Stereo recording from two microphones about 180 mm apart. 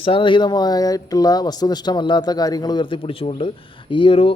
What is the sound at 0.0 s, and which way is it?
A man's voice, 30° left (ahead or behind).